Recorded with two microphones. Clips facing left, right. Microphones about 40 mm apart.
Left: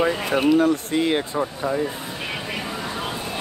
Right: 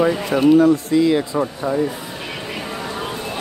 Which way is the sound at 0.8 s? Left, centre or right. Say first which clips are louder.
Right 5 dB; left.